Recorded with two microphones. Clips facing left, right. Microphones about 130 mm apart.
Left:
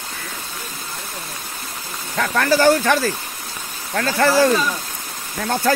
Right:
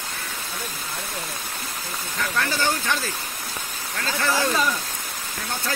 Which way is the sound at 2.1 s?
90° left.